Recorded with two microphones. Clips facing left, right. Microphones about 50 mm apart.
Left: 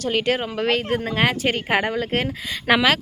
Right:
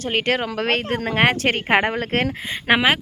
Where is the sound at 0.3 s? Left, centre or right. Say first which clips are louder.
Even; right.